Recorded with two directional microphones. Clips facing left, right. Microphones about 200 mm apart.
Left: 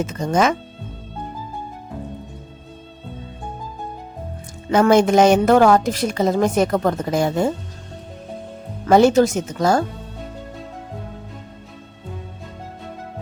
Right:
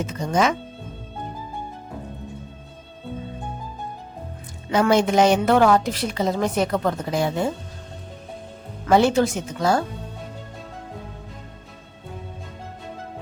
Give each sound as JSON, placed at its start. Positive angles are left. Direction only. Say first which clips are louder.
{"t": 0.0, "sound": "a woman's voice", "louder": "left 3 dB", "side_deg": 45}
{"t": 4.7, "sound": "a woman's voice", "louder": "left 4 dB", "side_deg": 50}
{"t": 8.9, "sound": "a woman's voice", "louder": "left 4 dB", "side_deg": 45}